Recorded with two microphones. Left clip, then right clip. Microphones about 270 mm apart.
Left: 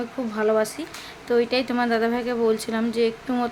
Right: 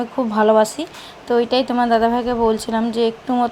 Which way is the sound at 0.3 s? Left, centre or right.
Centre.